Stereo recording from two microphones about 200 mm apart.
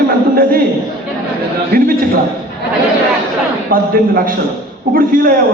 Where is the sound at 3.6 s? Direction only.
45° right (ahead or behind).